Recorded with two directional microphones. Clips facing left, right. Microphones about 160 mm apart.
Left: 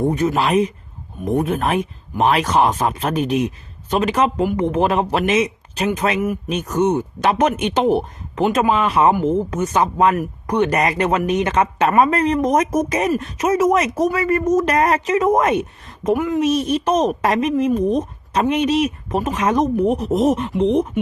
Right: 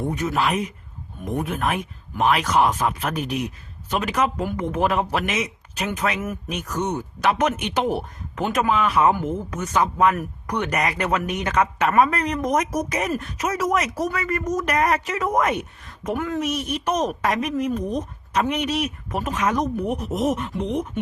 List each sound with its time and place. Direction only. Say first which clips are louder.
0.0 s a woman's voice: left 5 dB; 35° left (ahead or behind)
8.4 s a woman's voice: left 5 dB; 15° left (ahead or behind)
8.8 s a woman's voice: left 4 dB; 30° left (ahead or behind)
16.1 s a woman's voice: left 5 dB; 15° left (ahead or behind)
16.4 s a woman's voice: left 8 dB; 30° left (ahead or behind)